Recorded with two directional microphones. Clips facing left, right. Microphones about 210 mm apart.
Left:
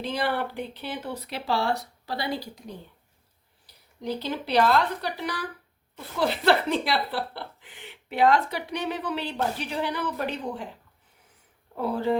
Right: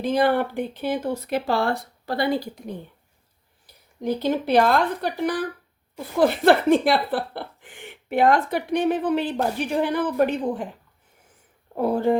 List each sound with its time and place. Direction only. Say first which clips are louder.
0.0 s speech: right 7 dB; 50° right (ahead or behind)
4.0 s speech: right 7 dB; 50° right (ahead or behind)
11.7 s speech: right 5 dB; 50° right (ahead or behind)